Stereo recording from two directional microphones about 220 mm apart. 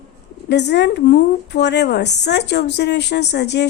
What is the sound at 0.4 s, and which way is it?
A woman's voice, 50° left (ahead or behind).